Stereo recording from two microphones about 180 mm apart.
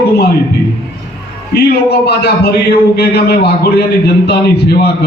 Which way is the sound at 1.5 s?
65° left (ahead or behind).